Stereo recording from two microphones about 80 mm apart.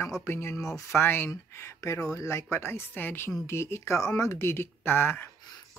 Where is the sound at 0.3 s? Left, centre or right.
Left.